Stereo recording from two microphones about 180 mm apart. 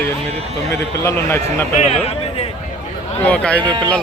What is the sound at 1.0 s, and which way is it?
Speech, 15° left (ahead or behind).